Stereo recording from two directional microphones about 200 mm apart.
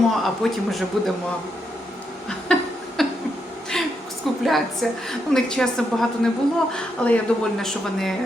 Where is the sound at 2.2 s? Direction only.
5° left (ahead or behind).